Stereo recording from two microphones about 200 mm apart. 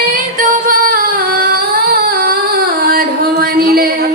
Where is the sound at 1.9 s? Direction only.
50° right (ahead or behind).